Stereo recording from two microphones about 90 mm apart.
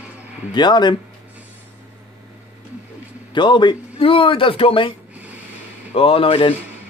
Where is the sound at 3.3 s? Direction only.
60° left (ahead or behind); by 4.9 s 80° left.